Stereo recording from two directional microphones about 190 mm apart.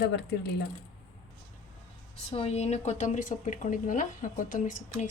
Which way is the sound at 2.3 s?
30° left (ahead or behind).